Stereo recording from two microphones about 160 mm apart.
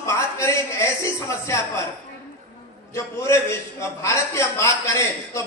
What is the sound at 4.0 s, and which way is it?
A man's voice, 20° left (ahead or behind).